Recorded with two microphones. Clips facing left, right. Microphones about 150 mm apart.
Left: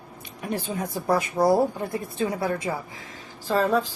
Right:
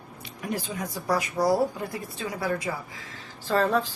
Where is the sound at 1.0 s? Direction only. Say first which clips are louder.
Left 3 dB; 25° left (ahead or behind).